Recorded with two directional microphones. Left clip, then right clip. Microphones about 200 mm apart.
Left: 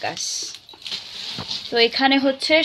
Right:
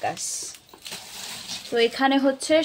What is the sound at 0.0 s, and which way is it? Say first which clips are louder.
Speech: left 3 dB; 5° right (ahead or behind).